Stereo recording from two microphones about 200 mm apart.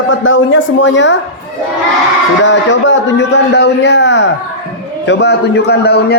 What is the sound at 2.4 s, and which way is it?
A man's voice, 65° left (ahead or behind).